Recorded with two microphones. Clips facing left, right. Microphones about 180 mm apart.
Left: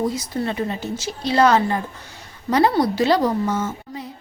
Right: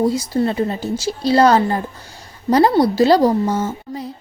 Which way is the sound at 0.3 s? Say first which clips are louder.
Right 5 dB; 35° right (ahead or behind).